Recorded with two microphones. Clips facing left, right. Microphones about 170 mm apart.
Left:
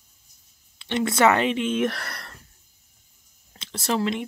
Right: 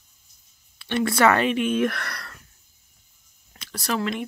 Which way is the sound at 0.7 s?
20° left (ahead or behind).